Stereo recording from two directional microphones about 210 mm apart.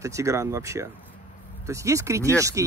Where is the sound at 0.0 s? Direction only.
15° right (ahead or behind).